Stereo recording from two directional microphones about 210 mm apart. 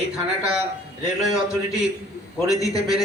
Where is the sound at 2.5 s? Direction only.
15° left (ahead or behind).